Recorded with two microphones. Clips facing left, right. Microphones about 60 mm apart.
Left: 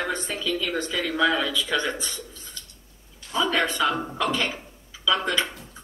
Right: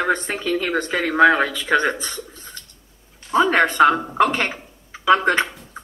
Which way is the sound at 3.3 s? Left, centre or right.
Right.